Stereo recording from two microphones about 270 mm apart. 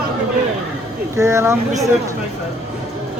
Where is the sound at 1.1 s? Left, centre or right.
Centre.